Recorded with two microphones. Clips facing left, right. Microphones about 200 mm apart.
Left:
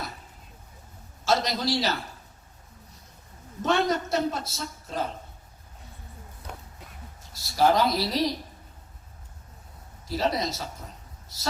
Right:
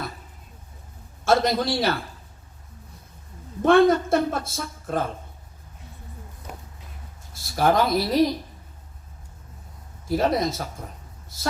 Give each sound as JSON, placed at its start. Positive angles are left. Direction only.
{"t": 1.2, "sound": "a woman's voice", "side_deg": -55}
{"t": 3.6, "sound": "a woman's voice", "side_deg": -55}
{"t": 7.5, "sound": "a woman's voice", "side_deg": -55}
{"t": 10.1, "sound": "a woman's voice", "side_deg": -50}